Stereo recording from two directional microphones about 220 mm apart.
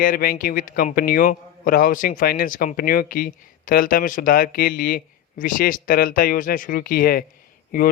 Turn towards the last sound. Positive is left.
turn(degrees=40)  # may be behind; listen again after turning